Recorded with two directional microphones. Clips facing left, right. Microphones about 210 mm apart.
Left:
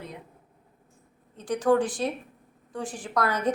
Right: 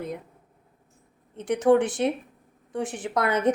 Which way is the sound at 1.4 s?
25° right (ahead or behind).